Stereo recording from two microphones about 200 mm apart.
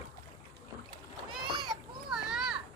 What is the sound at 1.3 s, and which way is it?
Children playing, centre (ahead or behind).